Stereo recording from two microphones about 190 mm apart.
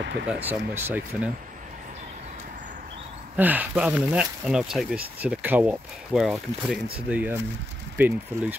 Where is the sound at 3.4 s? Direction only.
10° right (ahead or behind).